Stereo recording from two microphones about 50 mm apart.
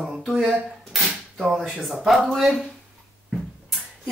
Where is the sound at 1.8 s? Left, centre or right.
Centre.